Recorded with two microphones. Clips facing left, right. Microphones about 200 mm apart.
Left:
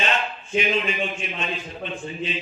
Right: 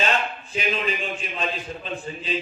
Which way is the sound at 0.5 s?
35° right (ahead or behind).